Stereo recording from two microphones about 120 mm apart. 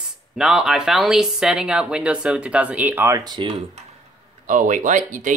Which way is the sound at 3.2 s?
35° right (ahead or behind).